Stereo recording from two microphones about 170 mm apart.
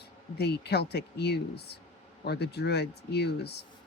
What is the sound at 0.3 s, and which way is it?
Speech, 75° left (ahead or behind).